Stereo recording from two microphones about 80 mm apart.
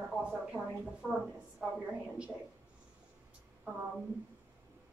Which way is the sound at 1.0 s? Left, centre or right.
Right.